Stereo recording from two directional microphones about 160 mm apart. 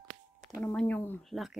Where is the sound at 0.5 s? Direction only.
5° left (ahead or behind).